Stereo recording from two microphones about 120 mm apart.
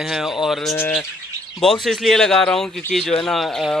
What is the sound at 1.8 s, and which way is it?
Speech, centre (ahead or behind).